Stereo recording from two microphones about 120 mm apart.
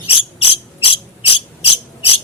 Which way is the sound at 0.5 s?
50° left (ahead or behind).